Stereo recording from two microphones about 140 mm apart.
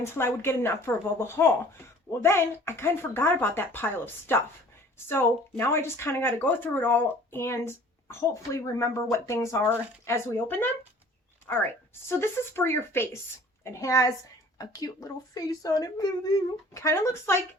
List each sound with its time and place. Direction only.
0.0 s speech: 15° left (ahead or behind)